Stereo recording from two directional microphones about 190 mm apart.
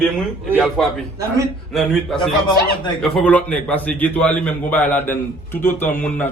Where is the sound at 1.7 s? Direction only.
Centre (ahead or behind).